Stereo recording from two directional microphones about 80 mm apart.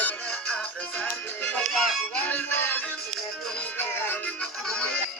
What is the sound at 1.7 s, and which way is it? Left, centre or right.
Music, centre.